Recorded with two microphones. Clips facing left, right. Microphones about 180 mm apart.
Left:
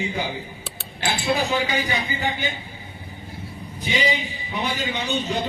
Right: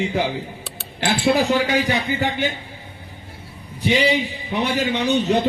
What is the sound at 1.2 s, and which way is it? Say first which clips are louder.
A man's voice: right 5 dB; 70° right (ahead or behind).